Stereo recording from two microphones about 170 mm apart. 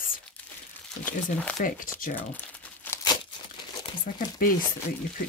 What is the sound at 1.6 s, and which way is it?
Speech, 55° left (ahead or behind).